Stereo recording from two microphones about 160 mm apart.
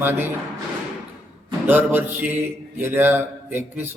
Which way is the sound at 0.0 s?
15° right (ahead or behind).